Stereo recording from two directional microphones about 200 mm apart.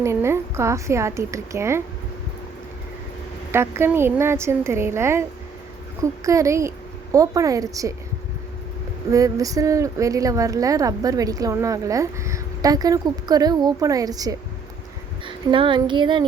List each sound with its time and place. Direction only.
0.0 s a woman's voice: 15° right (ahead or behind)
3.5 s a woman's voice: 10° right (ahead or behind)
9.0 s a woman's voice: 15° right (ahead or behind)
15.3 s female singing: 25° right (ahead or behind)